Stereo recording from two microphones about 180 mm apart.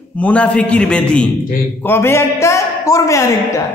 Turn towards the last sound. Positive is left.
turn(degrees=15)  # may be behind; listen again after turning